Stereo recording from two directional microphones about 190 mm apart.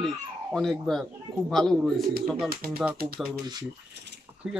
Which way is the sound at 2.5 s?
50° right (ahead or behind).